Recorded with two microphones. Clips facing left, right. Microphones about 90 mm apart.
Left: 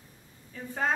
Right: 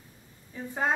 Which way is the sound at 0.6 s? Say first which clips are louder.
Right 3 dB; 20° right (ahead or behind).